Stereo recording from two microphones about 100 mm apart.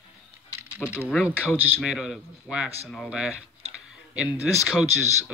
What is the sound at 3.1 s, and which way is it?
Speech, 10° right (ahead or behind).